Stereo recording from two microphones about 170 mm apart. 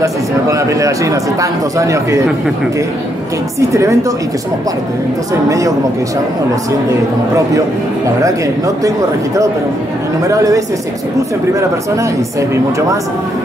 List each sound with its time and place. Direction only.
0.0 s a man's voice: 20° right (ahead or behind)
3.5 s a man's voice: 20° right (ahead or behind)
8.2 s a man's voice: 20° right (ahead or behind)